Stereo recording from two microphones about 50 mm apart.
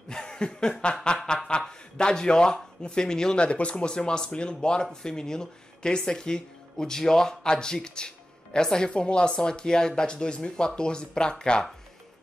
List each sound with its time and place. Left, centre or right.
0.1 s chuckle: centre
0.6 s speech: centre